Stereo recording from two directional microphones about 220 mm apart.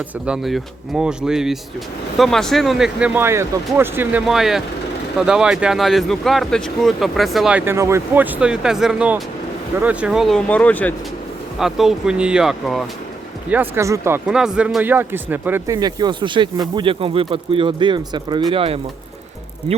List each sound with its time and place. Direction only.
0.3 s speech: centre (ahead or behind); by 18.8 s 25° right (ahead or behind)